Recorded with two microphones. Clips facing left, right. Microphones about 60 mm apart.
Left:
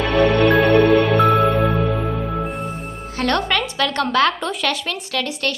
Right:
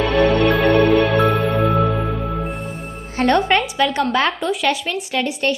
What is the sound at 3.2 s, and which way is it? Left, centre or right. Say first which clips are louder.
A woman's voice: right 4 dB; centre.